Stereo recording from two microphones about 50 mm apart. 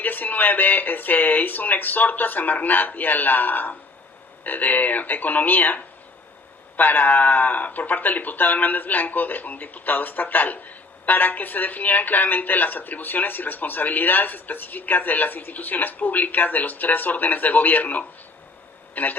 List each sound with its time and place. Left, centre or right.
0.0 s speech: left